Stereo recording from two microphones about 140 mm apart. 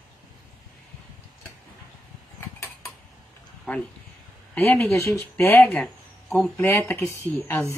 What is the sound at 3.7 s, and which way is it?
Speech, 10° left (ahead or behind).